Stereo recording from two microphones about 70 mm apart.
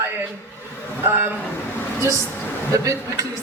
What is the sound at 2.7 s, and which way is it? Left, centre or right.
Speech, right.